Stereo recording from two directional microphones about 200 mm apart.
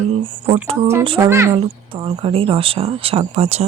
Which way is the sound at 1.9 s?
25° right (ahead or behind).